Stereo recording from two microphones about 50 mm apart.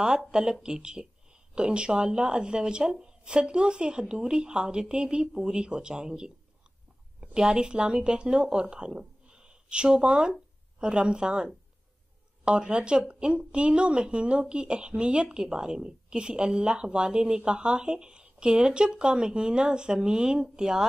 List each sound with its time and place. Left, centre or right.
0.0 s a woman's voice: centre